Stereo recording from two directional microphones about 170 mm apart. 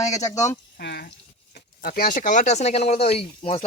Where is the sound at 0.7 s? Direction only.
70° left (ahead or behind).